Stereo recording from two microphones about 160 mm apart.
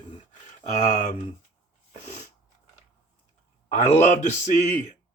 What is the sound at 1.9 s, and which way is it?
Sneeze, 45° left (ahead or behind).